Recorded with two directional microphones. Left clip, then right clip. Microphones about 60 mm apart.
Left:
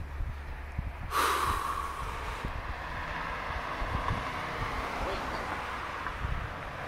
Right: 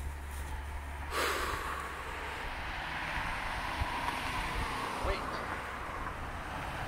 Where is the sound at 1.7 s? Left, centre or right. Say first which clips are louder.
Left 4 dB; left.